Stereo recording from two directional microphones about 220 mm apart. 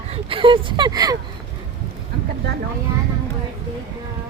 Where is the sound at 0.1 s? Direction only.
25° right (ahead or behind).